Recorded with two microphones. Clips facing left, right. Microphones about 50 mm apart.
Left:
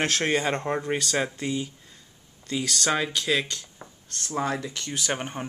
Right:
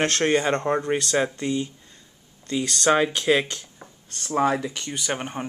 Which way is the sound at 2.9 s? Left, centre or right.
Centre.